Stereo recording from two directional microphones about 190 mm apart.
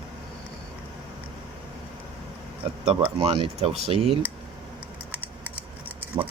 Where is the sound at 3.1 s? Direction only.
25° right (ahead or behind).